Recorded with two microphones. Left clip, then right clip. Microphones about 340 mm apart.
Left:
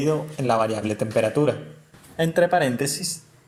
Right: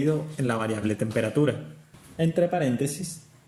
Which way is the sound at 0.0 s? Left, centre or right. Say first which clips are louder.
Left 3 dB; left.